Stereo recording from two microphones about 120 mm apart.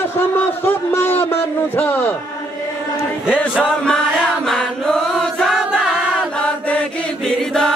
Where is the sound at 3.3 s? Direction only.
5° left (ahead or behind).